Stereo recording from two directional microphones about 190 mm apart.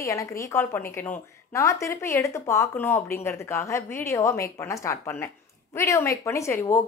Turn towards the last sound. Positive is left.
turn(degrees=15)  # may be behind; listen again after turning